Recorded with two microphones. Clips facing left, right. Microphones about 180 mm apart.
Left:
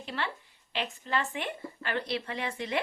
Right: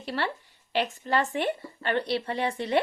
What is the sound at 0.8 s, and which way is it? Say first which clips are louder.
A woman's voice: right 6 dB; 40° right (ahead or behind).